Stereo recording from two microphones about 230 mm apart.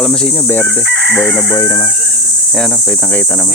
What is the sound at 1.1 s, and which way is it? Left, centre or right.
Speech, centre.